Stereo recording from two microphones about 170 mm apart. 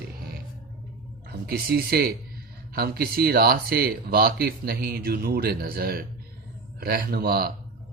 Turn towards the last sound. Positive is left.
turn(degrees=-65)  # may be behind; listen again after turning